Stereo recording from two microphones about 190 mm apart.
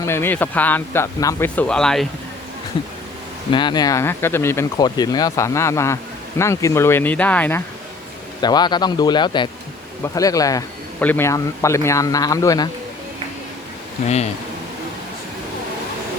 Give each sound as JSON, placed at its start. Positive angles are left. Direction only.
{"t": 0.0, "sound": "speech", "side_deg": 10}
{"t": 3.5, "sound": "speech", "side_deg": 25}
{"t": 8.4, "sound": "a man's voice", "side_deg": 20}